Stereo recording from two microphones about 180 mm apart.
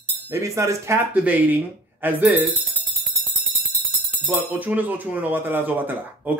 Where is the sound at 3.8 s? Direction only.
5° right (ahead or behind).